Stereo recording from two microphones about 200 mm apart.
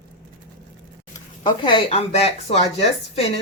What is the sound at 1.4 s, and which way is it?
Speech, 25° left (ahead or behind).